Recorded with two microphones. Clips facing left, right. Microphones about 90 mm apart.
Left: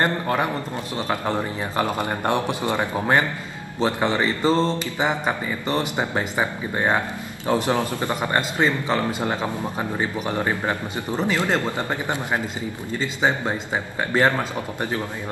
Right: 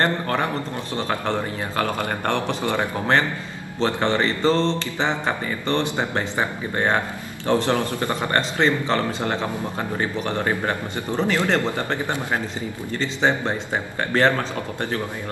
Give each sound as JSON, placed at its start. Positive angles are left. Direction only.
{"t": 0.0, "sound": "speech", "side_deg": 10}